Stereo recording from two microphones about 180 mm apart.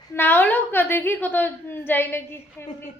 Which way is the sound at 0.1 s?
10° left (ahead or behind).